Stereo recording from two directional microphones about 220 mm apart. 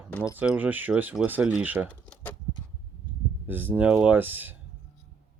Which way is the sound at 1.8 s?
5° left (ahead or behind).